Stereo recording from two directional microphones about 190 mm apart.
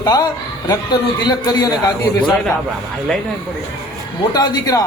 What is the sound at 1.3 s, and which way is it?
Speech, 20° left (ahead or behind).